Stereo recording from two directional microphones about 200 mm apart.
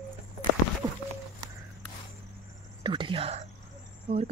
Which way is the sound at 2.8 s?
25° right (ahead or behind).